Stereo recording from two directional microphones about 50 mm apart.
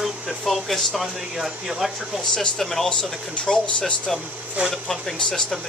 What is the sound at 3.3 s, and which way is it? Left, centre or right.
Speech, left.